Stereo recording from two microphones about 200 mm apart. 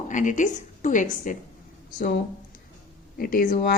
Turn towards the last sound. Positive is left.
turn(degrees=50)  # may be behind; listen again after turning